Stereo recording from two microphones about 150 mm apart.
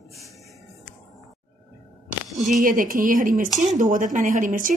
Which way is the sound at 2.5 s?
65° right (ahead or behind).